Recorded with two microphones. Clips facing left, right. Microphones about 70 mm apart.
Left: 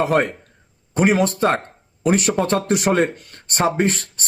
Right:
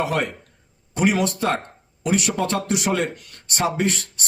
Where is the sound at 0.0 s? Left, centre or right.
Left.